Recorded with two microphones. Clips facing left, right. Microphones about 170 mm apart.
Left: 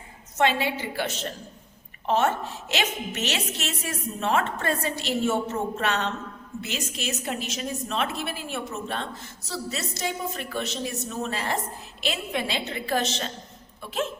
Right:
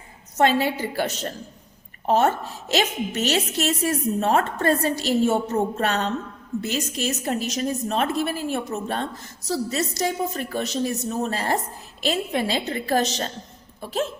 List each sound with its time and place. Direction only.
0.3 s a woman's voice: 40° right (ahead or behind)